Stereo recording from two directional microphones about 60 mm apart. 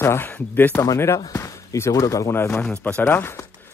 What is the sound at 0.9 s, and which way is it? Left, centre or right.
Speech, left.